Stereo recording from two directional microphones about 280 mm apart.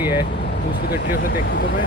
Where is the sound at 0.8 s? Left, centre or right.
Left.